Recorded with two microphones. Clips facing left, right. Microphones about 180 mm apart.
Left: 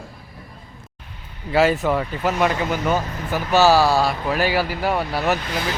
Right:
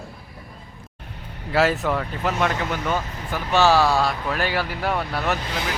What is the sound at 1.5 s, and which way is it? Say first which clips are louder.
Speech: left 3 dB; centre (ahead or behind).